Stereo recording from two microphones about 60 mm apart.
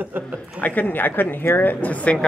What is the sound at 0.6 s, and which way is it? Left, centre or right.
Speech, left.